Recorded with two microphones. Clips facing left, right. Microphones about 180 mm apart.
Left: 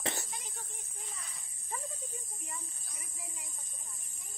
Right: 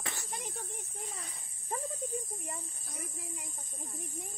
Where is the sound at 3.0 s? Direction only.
55° right (ahead or behind).